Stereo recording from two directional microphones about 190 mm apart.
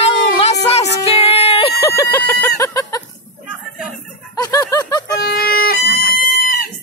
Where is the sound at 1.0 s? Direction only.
30° left (ahead or behind).